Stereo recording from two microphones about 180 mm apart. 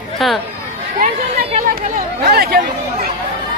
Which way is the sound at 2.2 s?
60° right (ahead or behind).